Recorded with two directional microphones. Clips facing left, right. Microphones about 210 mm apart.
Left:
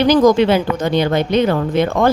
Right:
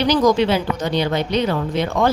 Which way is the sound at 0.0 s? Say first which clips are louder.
Left 5 dB; 50° left (ahead or behind).